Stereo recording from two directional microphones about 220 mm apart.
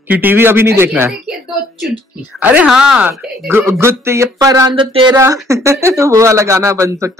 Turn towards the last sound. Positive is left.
turn(degrees=-15)  # may be behind; listen again after turning